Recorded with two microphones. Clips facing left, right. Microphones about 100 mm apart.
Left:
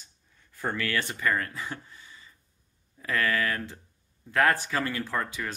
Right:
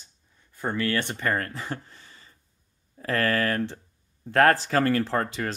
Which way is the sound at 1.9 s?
45° right (ahead or behind).